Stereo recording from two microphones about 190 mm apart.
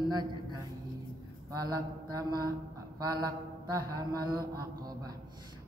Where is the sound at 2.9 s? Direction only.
20° right (ahead or behind).